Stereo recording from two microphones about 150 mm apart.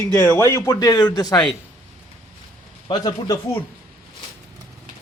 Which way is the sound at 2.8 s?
30° left (ahead or behind).